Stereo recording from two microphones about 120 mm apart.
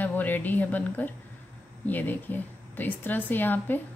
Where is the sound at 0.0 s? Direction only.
15° left (ahead or behind).